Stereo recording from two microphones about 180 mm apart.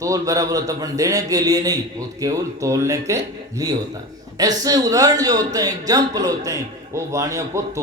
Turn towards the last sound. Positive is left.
turn(degrees=-15)  # may be behind; listen again after turning